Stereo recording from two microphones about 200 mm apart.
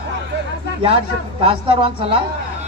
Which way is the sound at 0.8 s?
25° right (ahead or behind).